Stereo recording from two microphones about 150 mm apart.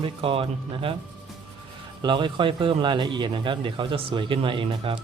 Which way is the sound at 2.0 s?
30° right (ahead or behind).